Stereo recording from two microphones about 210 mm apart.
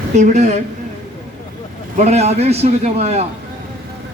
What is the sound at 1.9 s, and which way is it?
A man's voice, 30° right (ahead or behind).